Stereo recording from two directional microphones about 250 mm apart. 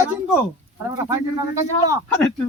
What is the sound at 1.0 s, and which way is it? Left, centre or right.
Speech, centre.